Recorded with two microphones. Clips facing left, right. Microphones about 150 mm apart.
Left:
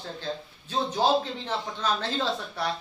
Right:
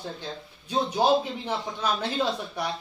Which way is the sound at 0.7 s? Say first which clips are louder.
Right 2 dB; 15° right (ahead or behind).